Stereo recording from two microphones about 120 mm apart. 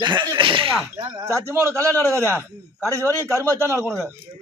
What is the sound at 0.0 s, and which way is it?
Speech, 40° right (ahead or behind).